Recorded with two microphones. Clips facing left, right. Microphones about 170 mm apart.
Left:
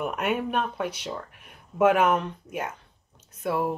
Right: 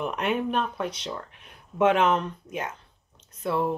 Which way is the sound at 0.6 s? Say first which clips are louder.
Even; 10° left (ahead or behind).